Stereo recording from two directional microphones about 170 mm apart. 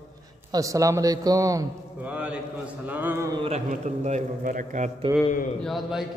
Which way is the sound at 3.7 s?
45° right (ahead or behind).